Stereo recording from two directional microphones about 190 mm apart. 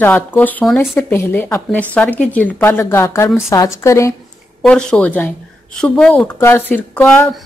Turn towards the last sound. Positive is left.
turn(degrees=5)  # may be behind; listen again after turning